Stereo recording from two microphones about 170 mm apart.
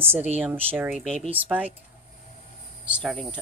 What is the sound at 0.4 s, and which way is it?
Speech, 10° right (ahead or behind).